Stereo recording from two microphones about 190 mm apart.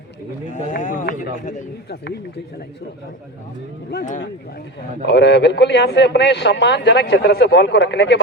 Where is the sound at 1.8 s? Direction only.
60° left (ahead or behind).